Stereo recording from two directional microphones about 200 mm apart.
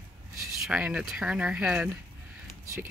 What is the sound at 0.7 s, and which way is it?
Speech, 5° right (ahead or behind).